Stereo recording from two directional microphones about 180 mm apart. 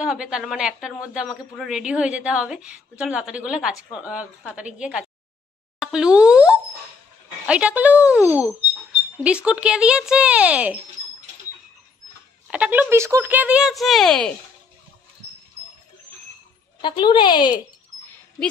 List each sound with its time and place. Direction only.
0.0 s a woman's voice: 5° right (ahead or behind)
5.8 s plop: 5° right (ahead or behind)
7.4 s speech: 5° right (ahead or behind)
12.4 s speech: 5° right (ahead or behind)
16.8 s speech: 25° left (ahead or behind)